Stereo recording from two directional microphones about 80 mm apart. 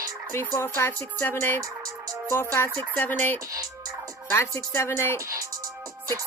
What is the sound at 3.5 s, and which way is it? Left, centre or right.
Music, right.